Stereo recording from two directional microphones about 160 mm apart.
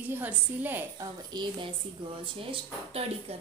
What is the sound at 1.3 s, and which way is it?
Speech, 25° right (ahead or behind).